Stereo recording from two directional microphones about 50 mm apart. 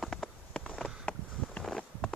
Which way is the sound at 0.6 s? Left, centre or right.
Left.